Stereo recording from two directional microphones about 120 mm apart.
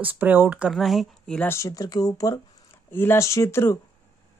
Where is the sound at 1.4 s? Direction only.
25° left (ahead or behind).